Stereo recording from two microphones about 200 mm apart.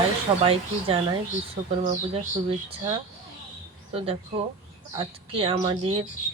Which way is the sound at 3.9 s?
30° right (ahead or behind).